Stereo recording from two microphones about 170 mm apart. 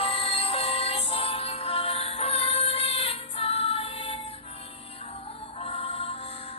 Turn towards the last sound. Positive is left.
turn(degrees=35)  # may be behind; listen again after turning